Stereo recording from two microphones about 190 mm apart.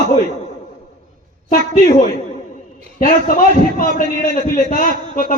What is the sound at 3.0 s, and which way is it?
A man's voice, 45° left (ahead or behind).